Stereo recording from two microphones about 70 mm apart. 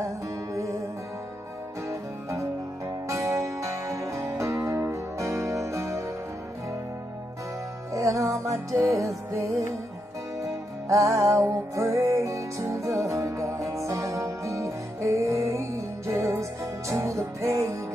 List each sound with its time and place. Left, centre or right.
3.1 s music: right
7.9 s music: right